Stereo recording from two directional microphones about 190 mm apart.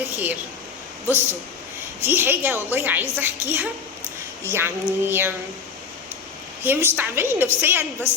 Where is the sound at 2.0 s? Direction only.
10° right (ahead or behind).